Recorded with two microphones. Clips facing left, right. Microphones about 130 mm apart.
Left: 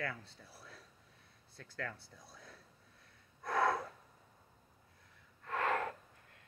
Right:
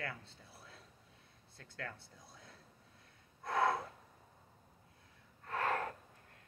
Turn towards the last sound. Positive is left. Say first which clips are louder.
# left 1 dB
turn(degrees=-40)  # may be behind; listen again after turning